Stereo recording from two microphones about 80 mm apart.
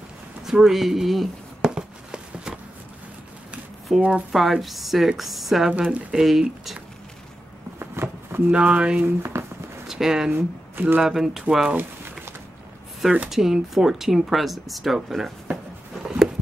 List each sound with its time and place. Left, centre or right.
0.4 s a sound: centre
3.9 s speech: centre
7.8 s a sound: right
8.5 s speech: centre
9.0 s speech: right
9.8 s speech: centre
10.3 s speech: right
11.0 s speech: centre
13.3 s speech: centre